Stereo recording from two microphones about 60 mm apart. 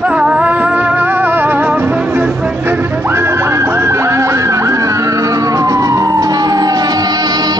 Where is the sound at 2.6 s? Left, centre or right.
Right.